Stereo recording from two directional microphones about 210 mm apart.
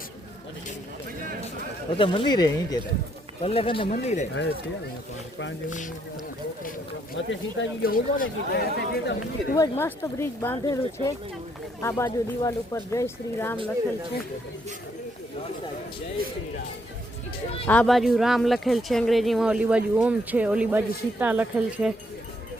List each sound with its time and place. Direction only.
1.9 s speech: 25° left (ahead or behind)
7.2 s speech: 60° left (ahead or behind)
7.8 s speech: 45° left (ahead or behind)
9.6 s speech: 10° left (ahead or behind)
17.7 s speech: 5° left (ahead or behind)